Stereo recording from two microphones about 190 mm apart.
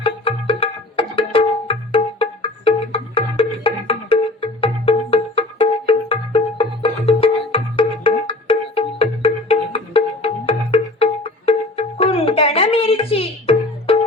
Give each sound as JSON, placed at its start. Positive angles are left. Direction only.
{"t": 0.3, "sound": "music", "side_deg": 30}